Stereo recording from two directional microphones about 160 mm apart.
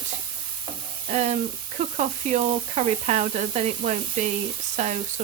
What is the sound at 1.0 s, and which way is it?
Speech, 45° right (ahead or behind).